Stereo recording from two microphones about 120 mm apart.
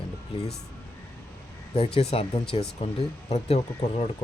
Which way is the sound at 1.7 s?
55° left (ahead or behind).